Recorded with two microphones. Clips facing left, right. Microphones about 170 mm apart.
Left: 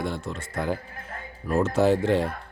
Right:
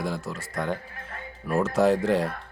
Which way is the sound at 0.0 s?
Centre (ahead or behind).